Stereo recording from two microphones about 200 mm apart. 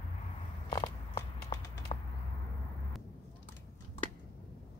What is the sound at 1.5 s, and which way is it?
Run, 20° left (ahead or behind).